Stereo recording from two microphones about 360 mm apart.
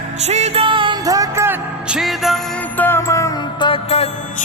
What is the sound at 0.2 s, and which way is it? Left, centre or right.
Music, centre.